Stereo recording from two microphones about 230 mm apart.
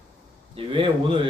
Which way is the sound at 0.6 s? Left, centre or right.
Right.